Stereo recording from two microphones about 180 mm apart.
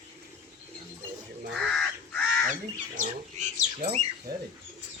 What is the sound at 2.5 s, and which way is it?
Bird, 45° right (ahead or behind).